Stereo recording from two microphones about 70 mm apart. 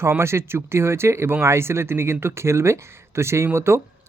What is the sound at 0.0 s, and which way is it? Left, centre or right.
Speech, right.